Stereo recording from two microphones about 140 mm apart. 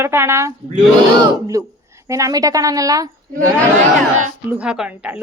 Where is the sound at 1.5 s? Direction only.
20° right (ahead or behind).